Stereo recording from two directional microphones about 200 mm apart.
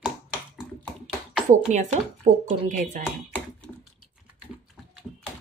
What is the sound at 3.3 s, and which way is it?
Typing, 5° left (ahead or behind).